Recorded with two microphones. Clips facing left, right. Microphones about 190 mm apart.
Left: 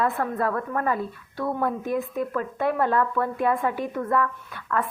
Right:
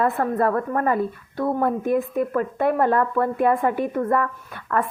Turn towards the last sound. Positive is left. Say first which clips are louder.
# right 3 dB
turn(degrees=-45)  # may be behind; listen again after turning